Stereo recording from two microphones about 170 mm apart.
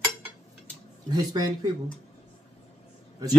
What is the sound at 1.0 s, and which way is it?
Speech, 25° right (ahead or behind).